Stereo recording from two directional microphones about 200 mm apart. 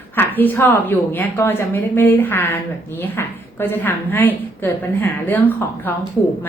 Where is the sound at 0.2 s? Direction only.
10° left (ahead or behind).